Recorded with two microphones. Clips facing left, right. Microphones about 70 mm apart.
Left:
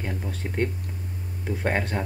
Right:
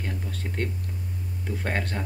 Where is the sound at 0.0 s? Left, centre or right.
Centre.